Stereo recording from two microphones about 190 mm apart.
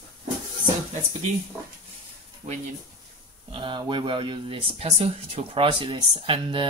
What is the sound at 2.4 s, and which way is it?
Speech, 40° right (ahead or behind).